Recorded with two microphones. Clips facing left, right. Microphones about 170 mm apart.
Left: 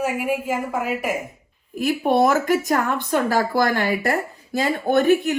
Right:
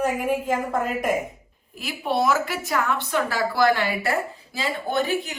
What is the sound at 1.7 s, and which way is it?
A woman's voice, 50° left (ahead or behind).